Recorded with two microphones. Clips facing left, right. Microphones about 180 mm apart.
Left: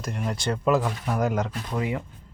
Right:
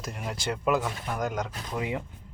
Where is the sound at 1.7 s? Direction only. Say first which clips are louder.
Left 3 dB; 20° right (ahead or behind).